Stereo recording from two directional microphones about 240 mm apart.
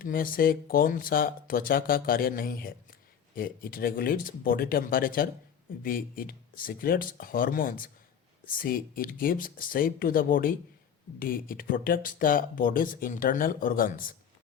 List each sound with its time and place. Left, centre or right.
0.0 s speech: left